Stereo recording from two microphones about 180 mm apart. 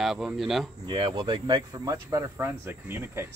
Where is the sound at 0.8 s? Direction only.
30° right (ahead or behind); by 3.2 s 10° right (ahead or behind).